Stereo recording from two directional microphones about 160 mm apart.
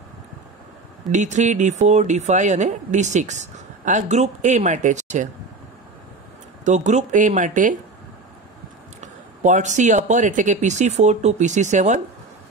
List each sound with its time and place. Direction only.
1.1 s speech: 50° right (ahead or behind)
6.6 s speech: 50° right (ahead or behind)
9.0 s speech: 50° right (ahead or behind)